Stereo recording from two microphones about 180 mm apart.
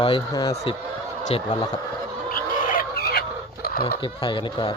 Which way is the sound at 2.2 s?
50° left (ahead or behind).